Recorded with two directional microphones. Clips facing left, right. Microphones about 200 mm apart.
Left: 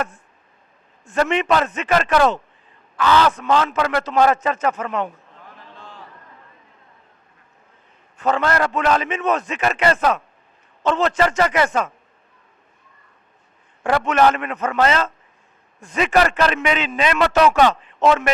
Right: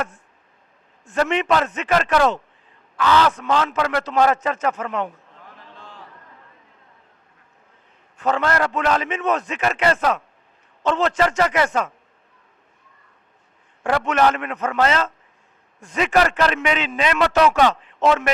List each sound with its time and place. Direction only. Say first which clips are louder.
1.1 s a man's voice: left 1 dB; 15° left (ahead or behind)
5.0 s a sound: left 1 dB; 20° left (ahead or behind)
8.2 s a man's voice: left 1 dB; 10° left (ahead or behind)
13.8 s a man's voice: left 2 dB; 15° left (ahead or behind)